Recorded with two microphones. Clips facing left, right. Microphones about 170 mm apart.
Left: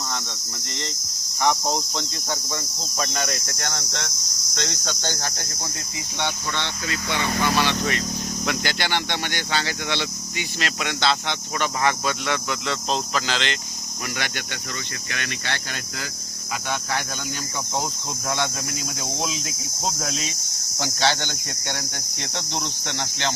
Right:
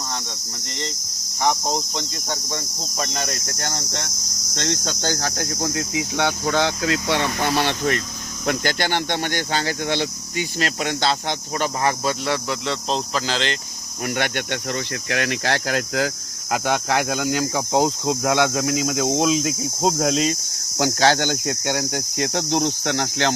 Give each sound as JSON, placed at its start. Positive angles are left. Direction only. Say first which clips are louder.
{"t": 4.6, "sound": "cricket", "louder": "right 5 dB", "side_deg": -55}
{"t": 8.4, "sound": "speech", "louder": "right 5 dB", "side_deg": -45}
{"t": 14.2, "sound": "speech", "louder": "right 9 dB", "side_deg": -60}
{"t": 16.5, "sound": "speech", "louder": "right 7 dB", "side_deg": -80}
{"t": 19.0, "sound": "speech", "louder": "right 10 dB", "side_deg": -70}
{"t": 19.8, "sound": "cricket", "louder": "right 9 dB", "side_deg": -75}
{"t": 21.0, "sound": "speech", "louder": "right 5 dB", "side_deg": -45}
{"t": 21.4, "sound": "cricket", "louder": "right 9 dB", "side_deg": -90}